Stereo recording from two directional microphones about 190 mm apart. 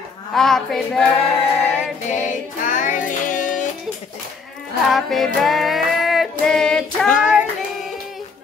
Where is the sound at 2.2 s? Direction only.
45° left (ahead or behind).